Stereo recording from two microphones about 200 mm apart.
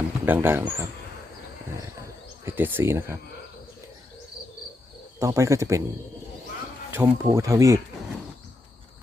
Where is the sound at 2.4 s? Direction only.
10° right (ahead or behind).